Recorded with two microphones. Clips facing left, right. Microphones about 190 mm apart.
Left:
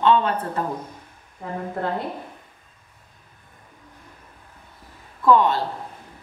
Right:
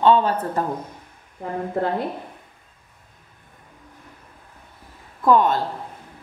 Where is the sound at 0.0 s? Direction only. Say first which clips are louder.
Right 2 dB; 35° right (ahead or behind).